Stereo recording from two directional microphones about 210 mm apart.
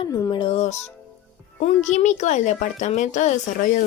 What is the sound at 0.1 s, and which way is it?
Speech, 20° left (ahead or behind).